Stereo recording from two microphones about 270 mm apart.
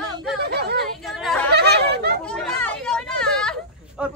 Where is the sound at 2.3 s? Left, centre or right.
Centre.